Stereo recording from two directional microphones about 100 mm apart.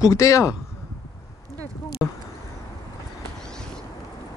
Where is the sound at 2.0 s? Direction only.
25° left (ahead or behind).